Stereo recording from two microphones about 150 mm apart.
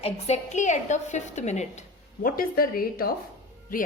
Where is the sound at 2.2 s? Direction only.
75° left (ahead or behind).